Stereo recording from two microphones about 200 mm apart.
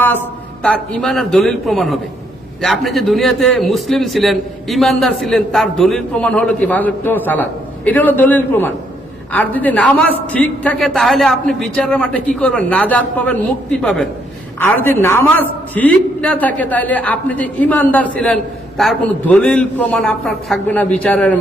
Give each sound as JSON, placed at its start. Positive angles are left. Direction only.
{"t": 0.6, "sound": "a man's voice", "side_deg": 5}